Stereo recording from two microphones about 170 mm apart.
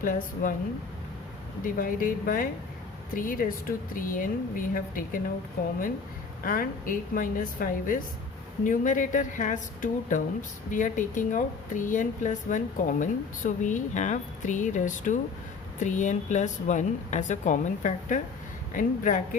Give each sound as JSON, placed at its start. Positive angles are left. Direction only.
{"t": 0.0, "sound": "speech", "side_deg": 55}
{"t": 1.6, "sound": "a woman's voice", "side_deg": 55}
{"t": 6.4, "sound": "a woman's voice", "side_deg": 55}